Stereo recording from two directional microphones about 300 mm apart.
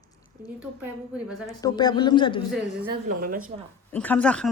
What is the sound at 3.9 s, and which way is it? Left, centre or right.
Speech, centre.